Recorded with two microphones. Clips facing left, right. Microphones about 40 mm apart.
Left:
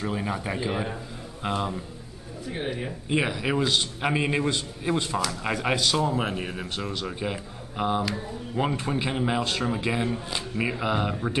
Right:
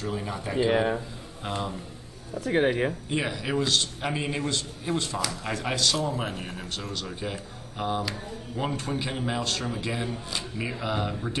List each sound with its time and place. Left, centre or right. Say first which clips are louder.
0.0 s speech: left 3 dB; centre
0.7 s speech: right 9 dB; right
1.4 s speech: left 4 dB; centre
2.4 s speech: right 8 dB; right
3.1 s a man's voice: left 3 dB; centre